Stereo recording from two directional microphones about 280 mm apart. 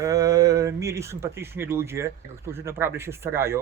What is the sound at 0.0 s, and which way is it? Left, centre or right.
Speech, centre.